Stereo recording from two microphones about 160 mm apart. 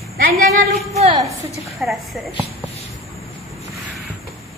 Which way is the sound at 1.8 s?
Centre (ahead or behind).